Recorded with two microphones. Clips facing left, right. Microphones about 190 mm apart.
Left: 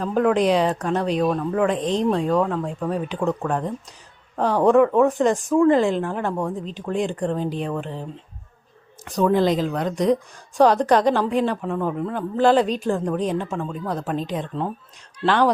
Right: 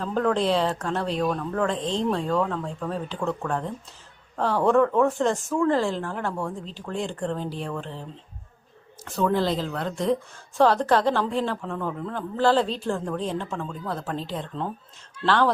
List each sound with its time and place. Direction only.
0.0 s a woman's voice: 15° left (ahead or behind)
9.0 s a woman's voice: 15° left (ahead or behind)